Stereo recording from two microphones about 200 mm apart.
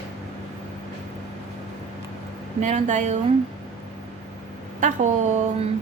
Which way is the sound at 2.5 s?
35° right (ahead or behind).